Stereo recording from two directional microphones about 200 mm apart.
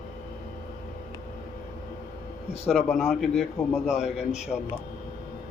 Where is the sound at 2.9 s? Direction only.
Centre (ahead or behind).